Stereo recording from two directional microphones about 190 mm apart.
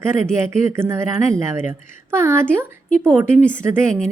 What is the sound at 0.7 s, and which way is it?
A woman's voice, 15° right (ahead or behind).